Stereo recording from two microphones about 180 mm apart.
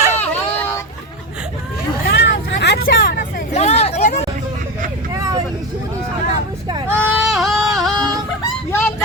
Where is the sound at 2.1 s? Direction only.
70° left (ahead or behind).